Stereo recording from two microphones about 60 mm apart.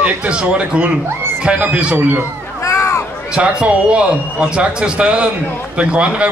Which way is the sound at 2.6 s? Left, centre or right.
Left.